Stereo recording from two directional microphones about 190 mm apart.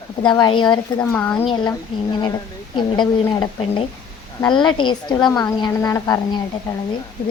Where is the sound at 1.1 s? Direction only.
10° left (ahead or behind).